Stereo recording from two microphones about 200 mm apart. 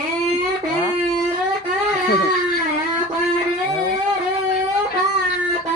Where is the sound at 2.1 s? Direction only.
50° left (ahead or behind).